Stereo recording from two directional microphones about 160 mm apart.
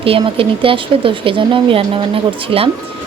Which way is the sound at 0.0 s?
35° right (ahead or behind).